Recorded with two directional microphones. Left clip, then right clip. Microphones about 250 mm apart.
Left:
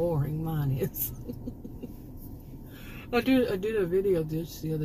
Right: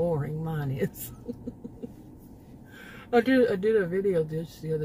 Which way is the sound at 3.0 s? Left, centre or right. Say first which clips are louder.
Right 4 dB; right.